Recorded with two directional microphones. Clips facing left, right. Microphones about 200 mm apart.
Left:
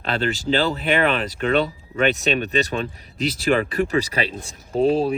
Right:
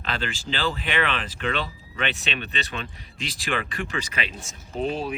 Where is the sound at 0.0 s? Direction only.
40° left (ahead or behind).